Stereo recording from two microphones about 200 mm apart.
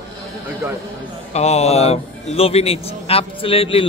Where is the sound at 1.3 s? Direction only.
30° left (ahead or behind).